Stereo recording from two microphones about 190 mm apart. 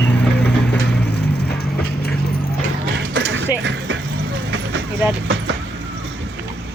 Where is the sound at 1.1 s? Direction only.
60° left (ahead or behind).